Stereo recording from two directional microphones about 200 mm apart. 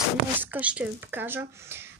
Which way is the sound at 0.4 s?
10° right (ahead or behind).